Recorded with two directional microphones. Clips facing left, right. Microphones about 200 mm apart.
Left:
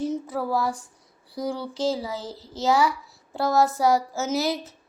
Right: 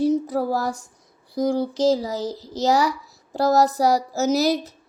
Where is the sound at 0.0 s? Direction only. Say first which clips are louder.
Right 7 dB; 40° right (ahead or behind).